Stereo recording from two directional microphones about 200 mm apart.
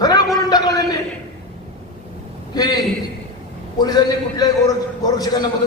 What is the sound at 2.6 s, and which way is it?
Speech, 20° left (ahead or behind).